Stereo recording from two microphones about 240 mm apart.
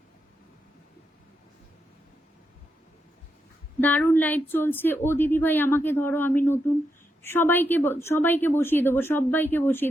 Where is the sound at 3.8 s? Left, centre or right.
Centre.